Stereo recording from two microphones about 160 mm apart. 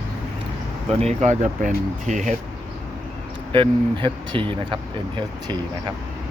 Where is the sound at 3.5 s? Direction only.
30° right (ahead or behind).